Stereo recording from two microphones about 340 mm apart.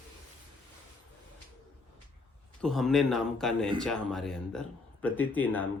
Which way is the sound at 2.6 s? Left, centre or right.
Centre.